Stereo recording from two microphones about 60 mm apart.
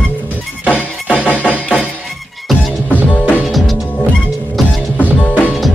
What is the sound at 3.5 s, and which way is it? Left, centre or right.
Music, centre.